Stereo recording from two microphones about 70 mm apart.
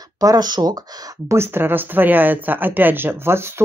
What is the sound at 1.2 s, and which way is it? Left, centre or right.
Speech, right.